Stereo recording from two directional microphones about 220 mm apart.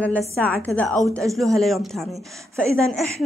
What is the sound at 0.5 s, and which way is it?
A woman's voice, 5° left (ahead or behind).